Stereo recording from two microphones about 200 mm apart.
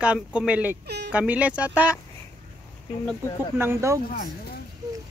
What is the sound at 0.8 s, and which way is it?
Speech, 55° right (ahead or behind).